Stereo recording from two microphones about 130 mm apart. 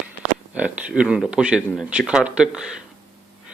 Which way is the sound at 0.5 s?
10° right (ahead or behind).